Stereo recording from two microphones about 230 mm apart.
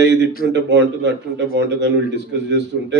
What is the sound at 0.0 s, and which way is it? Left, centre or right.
A man's voice, right.